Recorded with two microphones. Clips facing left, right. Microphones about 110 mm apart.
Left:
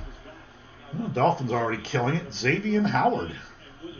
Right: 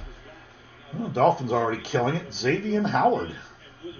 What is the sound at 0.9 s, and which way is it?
Speech, 15° right (ahead or behind).